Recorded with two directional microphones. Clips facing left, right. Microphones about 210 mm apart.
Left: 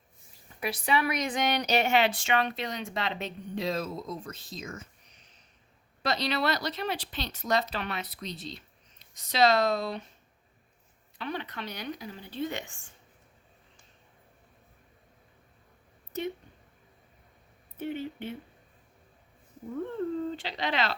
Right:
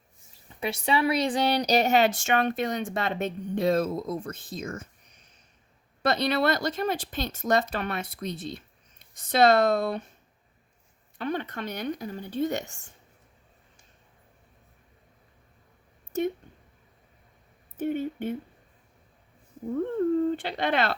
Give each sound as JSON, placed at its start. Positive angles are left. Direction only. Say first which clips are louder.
{"t": 0.6, "sound": "a woman's voice", "louder": "right 3 dB", "side_deg": -25}
{"t": 6.0, "sound": "a woman's voice", "louder": "right 5 dB", "side_deg": -55}
{"t": 11.2, "sound": "a woman's voice", "louder": "right 5 dB", "side_deg": -50}
{"t": 17.7, "sound": "speech", "louder": "right 6 dB", "side_deg": -50}
{"t": 20.3, "sound": "speech", "louder": "right 5 dB", "side_deg": -55}